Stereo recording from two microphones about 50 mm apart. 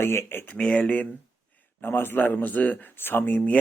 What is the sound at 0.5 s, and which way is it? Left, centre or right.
Speech, left.